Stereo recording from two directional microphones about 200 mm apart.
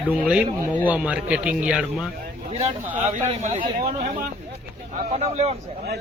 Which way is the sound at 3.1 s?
35° right (ahead or behind).